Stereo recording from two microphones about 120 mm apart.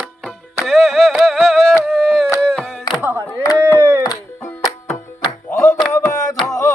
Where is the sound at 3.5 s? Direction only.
20° left (ahead or behind).